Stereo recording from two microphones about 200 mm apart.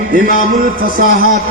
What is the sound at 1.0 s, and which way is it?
Music, 45° right (ahead or behind).